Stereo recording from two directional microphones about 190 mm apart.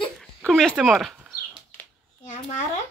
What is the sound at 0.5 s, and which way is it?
Speech, centre (ahead or behind).